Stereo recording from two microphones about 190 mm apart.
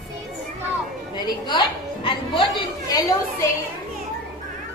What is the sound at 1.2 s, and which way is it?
A woman's voice, 25° left (ahead or behind).